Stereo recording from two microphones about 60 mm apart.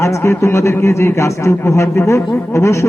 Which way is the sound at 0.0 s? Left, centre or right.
Left.